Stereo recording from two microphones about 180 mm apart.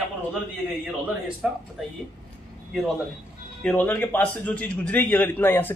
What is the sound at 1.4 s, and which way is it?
Speech, 5° right (ahead or behind).